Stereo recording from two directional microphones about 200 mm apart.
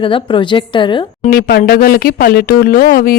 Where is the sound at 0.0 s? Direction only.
25° left (ahead or behind).